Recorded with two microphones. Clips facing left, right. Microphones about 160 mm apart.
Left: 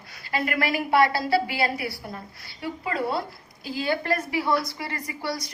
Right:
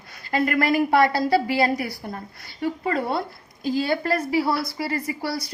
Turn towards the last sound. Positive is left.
turn(degrees=-30)  # may be behind; listen again after turning